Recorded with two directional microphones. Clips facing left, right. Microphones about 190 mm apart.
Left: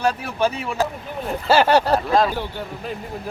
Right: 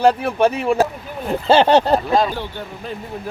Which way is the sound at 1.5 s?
25° right (ahead or behind).